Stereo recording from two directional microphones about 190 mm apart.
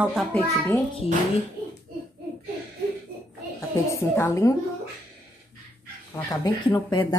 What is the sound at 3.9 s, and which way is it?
Speech, 15° left (ahead or behind).